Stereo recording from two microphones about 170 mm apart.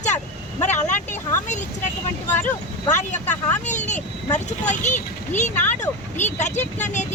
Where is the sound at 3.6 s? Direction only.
45° left (ahead or behind).